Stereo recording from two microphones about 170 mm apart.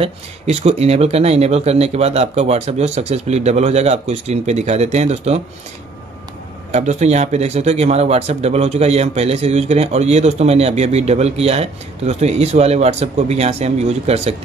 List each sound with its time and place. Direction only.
0.0 s speech: 40° right (ahead or behind)
6.7 s speech: 40° right (ahead or behind)